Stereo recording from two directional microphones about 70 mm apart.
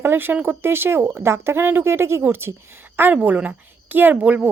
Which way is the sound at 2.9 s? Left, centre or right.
Right.